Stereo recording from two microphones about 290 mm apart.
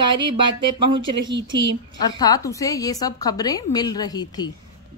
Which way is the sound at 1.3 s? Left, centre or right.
Right.